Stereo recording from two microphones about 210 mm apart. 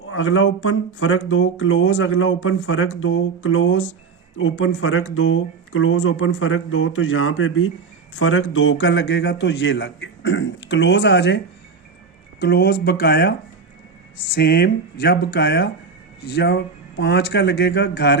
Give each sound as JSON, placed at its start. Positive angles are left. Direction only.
{"t": 0.1, "sound": "a man's voice", "side_deg": 65}
{"t": 12.4, "sound": "speech", "side_deg": 50}
{"t": 14.3, "sound": "speech", "side_deg": 50}